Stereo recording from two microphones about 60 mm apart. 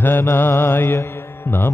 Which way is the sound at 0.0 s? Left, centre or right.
Left.